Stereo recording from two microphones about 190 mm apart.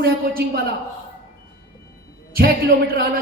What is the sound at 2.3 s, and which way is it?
Speech, 55° right (ahead or behind).